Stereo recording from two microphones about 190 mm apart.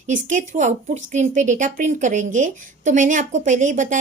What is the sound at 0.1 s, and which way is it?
A woman's voice, 40° right (ahead or behind).